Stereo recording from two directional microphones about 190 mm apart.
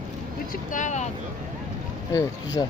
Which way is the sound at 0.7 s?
40° left (ahead or behind).